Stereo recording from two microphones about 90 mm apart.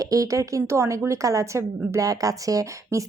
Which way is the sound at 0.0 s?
40° right (ahead or behind).